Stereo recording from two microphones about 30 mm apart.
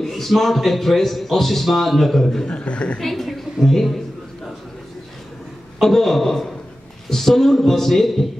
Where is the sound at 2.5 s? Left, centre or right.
Left.